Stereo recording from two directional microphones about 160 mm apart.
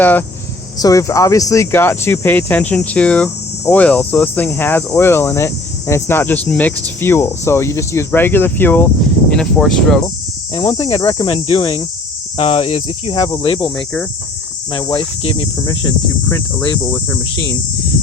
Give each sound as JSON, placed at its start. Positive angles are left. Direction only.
{"t": 0.0, "sound": "cricket", "side_deg": 10}
{"t": 9.3, "sound": "speech", "side_deg": 5}
{"t": 10.5, "sound": "speech", "side_deg": 35}
{"t": 13.7, "sound": "cricket", "side_deg": 10}
{"t": 14.7, "sound": "speech", "side_deg": 30}